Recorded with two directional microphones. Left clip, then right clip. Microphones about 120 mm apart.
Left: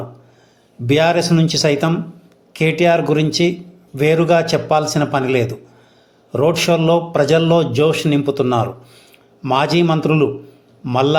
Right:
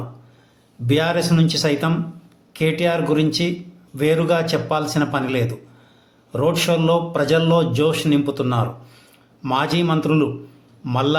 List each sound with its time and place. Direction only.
0.9 s a man's voice: 35° left (ahead or behind)